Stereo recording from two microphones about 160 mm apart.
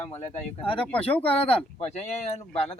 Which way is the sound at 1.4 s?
40° left (ahead or behind).